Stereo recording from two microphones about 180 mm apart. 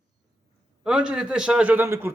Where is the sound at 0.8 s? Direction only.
5° right (ahead or behind).